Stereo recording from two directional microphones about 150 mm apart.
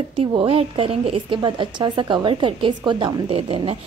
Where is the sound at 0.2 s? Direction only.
40° right (ahead or behind).